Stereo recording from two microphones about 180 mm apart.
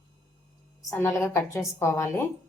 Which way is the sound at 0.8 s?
15° left (ahead or behind).